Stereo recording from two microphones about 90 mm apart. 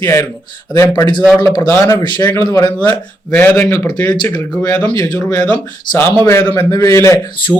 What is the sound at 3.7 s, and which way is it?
Speech, 45° left (ahead or behind).